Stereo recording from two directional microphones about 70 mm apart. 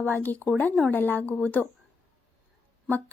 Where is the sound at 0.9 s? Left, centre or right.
Left.